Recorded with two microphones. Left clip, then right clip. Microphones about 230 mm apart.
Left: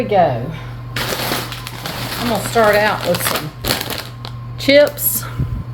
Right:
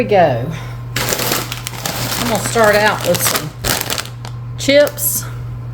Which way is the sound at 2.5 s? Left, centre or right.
Centre.